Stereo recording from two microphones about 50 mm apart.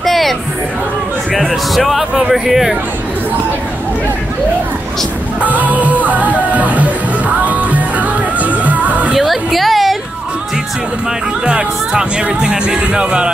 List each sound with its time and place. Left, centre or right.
0.0 s music: centre
1.5 s speech: centre
5.4 s music: right
9.1 s a sound: centre
11.4 s speech: centre